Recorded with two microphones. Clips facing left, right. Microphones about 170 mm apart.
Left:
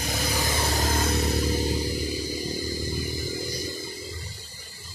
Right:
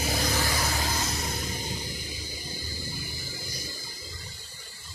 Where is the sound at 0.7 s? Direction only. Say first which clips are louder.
Left 6 dB; 55° left (ahead or behind).